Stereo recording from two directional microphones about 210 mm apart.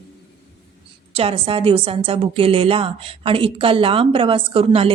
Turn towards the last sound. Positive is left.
turn(degrees=-25)  # may be behind; listen again after turning